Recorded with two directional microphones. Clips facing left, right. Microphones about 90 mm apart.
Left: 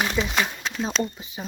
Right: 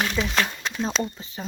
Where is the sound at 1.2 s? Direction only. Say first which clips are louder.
Even; 15° left (ahead or behind).